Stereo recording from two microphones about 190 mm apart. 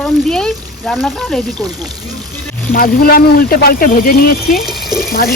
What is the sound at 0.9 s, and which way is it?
Speech, 5° left (ahead or behind).